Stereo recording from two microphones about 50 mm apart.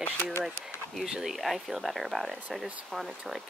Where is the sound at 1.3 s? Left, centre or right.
Centre.